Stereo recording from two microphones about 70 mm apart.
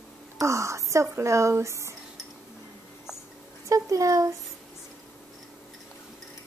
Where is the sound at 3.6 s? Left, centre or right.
Right.